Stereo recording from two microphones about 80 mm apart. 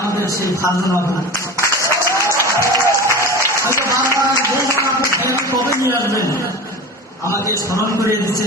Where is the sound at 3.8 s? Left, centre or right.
Right.